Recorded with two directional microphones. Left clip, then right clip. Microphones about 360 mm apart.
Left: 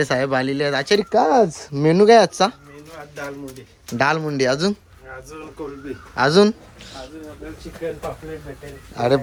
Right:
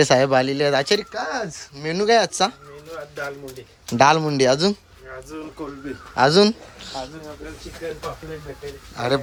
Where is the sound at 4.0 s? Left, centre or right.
Centre.